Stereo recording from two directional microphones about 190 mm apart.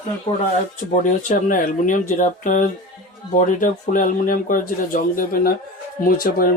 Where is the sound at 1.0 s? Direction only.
40° left (ahead or behind).